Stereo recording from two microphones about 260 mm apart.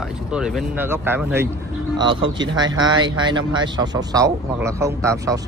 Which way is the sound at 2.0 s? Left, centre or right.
Centre.